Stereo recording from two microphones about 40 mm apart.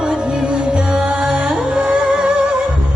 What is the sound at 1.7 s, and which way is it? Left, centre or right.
Music, right.